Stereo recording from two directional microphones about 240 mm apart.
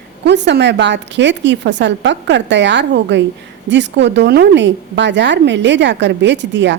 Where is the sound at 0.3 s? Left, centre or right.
Right.